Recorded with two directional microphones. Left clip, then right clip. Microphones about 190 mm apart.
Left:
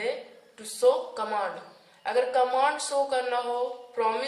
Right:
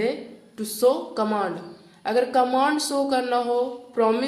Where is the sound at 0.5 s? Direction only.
55° right (ahead or behind).